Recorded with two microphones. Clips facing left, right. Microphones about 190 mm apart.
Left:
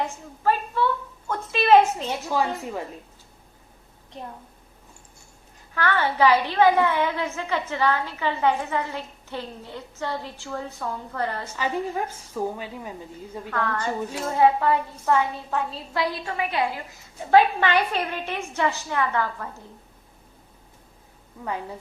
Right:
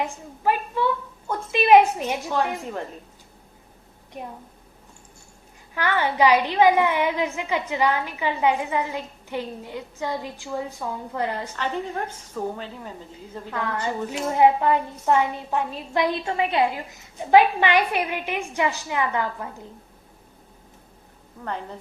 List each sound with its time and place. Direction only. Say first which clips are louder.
1.3 s a sound: right 2 dB; 15° right (ahead or behind)
5.7 s a child's voice: even; 15° right (ahead or behind)
11.5 s a woman's voice: left 1 dB; 5° left (ahead or behind)
13.5 s a child's voice: even; 15° right (ahead or behind)
21.4 s a woman's voice: left 1 dB; 10° left (ahead or behind)